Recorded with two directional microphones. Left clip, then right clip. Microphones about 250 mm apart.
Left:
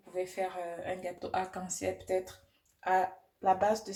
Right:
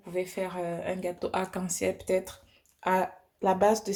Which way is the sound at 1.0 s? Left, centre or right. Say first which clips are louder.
Right 3 dB; right.